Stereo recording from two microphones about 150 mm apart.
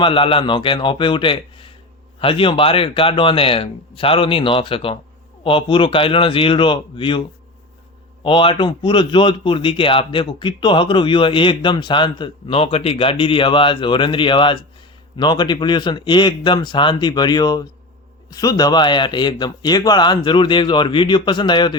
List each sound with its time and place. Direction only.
0.0 s a man's voice: 35° left (ahead or behind)
8.2 s a man's voice: 35° left (ahead or behind)